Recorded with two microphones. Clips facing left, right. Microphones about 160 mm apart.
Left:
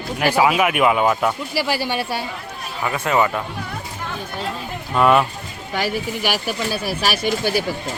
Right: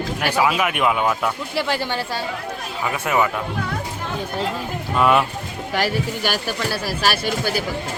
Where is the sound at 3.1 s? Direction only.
10° right (ahead or behind).